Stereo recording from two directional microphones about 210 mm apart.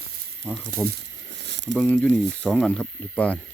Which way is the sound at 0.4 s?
5° left (ahead or behind).